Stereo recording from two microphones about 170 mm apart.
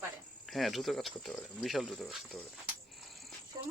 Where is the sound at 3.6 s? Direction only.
25° right (ahead or behind).